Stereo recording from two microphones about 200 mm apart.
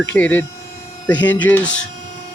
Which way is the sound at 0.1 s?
10° left (ahead or behind).